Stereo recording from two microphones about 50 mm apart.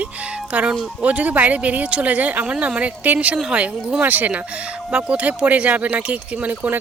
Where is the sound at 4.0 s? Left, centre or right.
Right.